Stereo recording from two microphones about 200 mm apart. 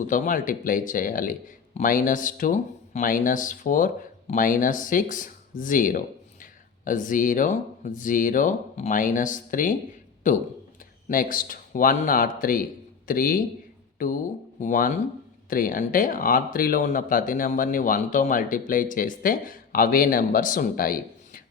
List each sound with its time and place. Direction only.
0.1 s speech: 40° left (ahead or behind)